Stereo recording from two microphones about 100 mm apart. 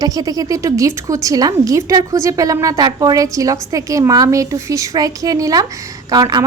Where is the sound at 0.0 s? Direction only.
35° right (ahead or behind).